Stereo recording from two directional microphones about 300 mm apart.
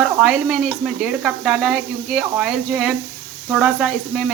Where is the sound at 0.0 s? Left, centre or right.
Centre.